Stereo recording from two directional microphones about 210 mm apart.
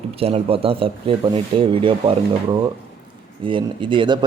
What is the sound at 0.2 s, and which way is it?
Speech, 30° right (ahead or behind).